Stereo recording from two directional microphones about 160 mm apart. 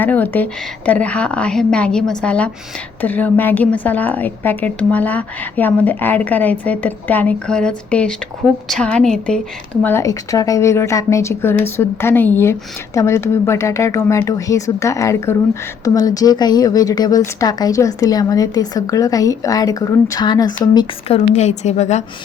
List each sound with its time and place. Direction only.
0.0 s a woman's voice: 10° left (ahead or behind)
9.8 s a woman's voice: 15° left (ahead or behind)
21.3 s a woman's voice: 45° left (ahead or behind)